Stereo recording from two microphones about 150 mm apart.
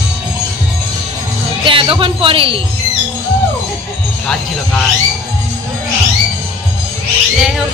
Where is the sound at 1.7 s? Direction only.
35° right (ahead or behind).